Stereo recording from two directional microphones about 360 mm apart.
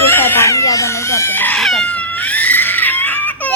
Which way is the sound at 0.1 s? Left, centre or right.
Centre.